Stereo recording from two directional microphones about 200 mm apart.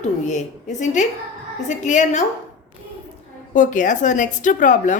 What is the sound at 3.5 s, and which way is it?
A woman's voice, 40° left (ahead or behind).